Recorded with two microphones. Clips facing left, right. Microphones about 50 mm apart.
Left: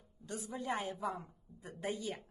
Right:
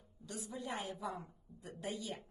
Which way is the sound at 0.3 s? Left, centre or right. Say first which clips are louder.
Left 4 dB; left.